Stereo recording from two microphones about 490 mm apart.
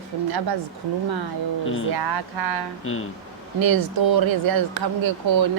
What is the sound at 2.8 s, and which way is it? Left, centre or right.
Speech, left.